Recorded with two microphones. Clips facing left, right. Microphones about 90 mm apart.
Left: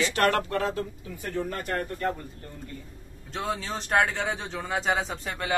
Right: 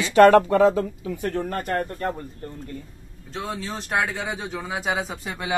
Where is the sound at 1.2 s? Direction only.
55° right (ahead or behind).